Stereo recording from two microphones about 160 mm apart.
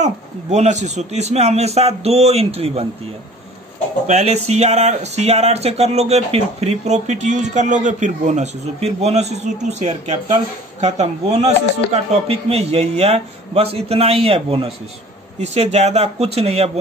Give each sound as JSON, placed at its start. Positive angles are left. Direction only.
{"t": 0.0, "sound": "a man's voice", "side_deg": -45}
{"t": 4.1, "sound": "a man's voice", "side_deg": -45}